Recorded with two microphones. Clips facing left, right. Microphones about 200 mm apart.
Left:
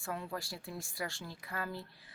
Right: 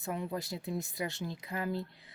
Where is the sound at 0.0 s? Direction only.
20° right (ahead or behind).